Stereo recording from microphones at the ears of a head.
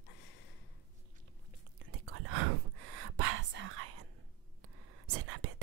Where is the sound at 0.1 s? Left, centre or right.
Left.